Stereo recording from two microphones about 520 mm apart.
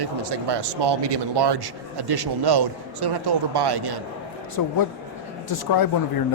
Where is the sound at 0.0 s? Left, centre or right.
Right.